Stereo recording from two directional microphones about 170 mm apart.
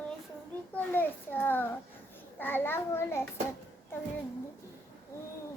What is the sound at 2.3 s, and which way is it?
Speech, 10° left (ahead or behind).